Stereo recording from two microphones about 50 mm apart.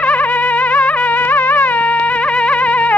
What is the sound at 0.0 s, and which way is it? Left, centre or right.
Music, left.